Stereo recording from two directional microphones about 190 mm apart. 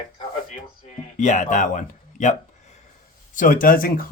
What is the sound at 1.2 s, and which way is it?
Speech, 40° left (ahead or behind).